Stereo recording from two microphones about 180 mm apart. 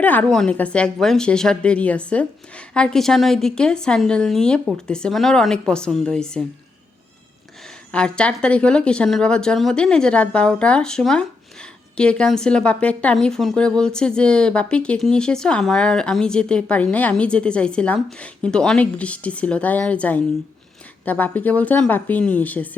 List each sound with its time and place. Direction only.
0.0 s speech: 10° left (ahead or behind)
7.9 s speech: 5° left (ahead or behind)